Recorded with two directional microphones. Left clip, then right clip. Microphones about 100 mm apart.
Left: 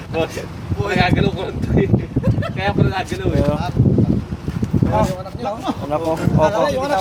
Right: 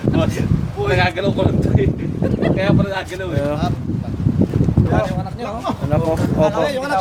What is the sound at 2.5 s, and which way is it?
Speech, 40° right (ahead or behind).